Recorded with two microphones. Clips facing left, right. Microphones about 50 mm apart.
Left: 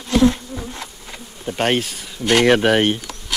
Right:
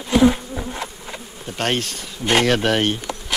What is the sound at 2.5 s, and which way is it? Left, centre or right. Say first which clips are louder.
Speech: left 4 dB; centre.